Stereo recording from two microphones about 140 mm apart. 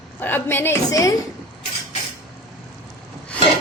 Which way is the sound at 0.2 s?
15° left (ahead or behind).